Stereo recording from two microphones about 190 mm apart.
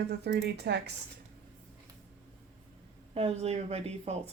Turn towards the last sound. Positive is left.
turn(degrees=-35)  # may be behind; listen again after turning